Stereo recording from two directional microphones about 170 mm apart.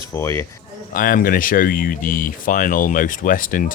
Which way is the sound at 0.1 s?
15° left (ahead or behind).